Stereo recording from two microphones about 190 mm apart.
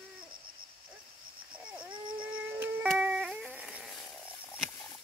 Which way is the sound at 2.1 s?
5° right (ahead or behind).